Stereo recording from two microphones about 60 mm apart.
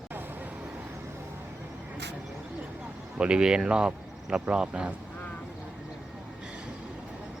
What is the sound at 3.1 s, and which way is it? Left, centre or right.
Speech, centre.